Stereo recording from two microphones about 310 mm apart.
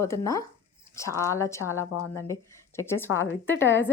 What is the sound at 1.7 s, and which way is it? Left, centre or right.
Speech, left.